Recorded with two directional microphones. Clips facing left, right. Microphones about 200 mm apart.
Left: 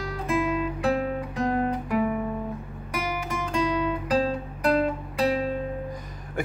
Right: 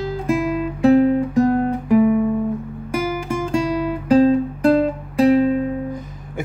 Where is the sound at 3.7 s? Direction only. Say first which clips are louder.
Right 5 dB; 30° right (ahead or behind).